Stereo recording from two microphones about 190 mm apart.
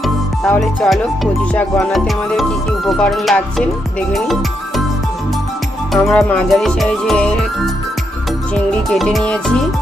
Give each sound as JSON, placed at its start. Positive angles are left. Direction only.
{"t": 0.0, "sound": "music", "side_deg": 0}
{"t": 5.9, "sound": "music", "side_deg": 5}